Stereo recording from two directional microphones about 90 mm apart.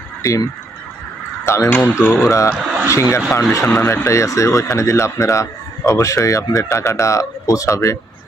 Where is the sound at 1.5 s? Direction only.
30° left (ahead or behind).